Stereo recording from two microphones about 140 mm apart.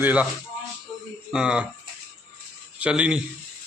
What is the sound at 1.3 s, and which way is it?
Speech, 5° right (ahead or behind).